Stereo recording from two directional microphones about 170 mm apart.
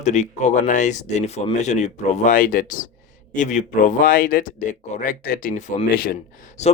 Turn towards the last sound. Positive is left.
turn(degrees=55)  # may be behind; listen again after turning